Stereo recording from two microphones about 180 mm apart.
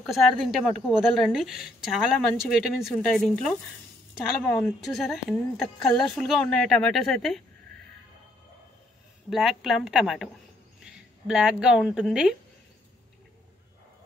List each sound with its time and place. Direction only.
0.0 s a woman's voice: centre (ahead or behind)
9.3 s speech: centre (ahead or behind)